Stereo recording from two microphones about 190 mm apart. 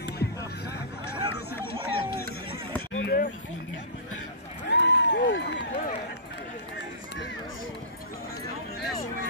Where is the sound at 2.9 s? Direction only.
80° left.